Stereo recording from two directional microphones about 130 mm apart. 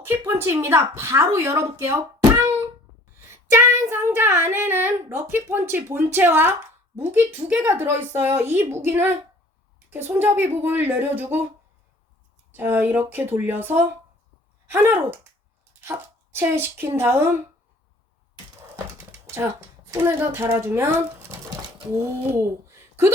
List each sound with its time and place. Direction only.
0.0 s a woman's voice: 20° right (ahead or behind)
12.5 s speech: 15° right (ahead or behind)
18.9 s typing: 20° right (ahead or behind)
19.9 s speech: 15° right (ahead or behind)